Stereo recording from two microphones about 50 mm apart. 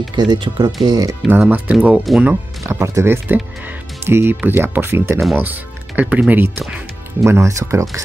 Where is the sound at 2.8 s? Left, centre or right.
Right.